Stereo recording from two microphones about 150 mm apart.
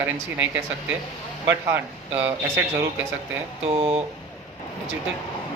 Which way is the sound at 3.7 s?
40° right (ahead or behind).